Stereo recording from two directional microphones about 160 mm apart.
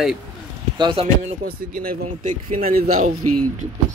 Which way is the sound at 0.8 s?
30° right (ahead or behind).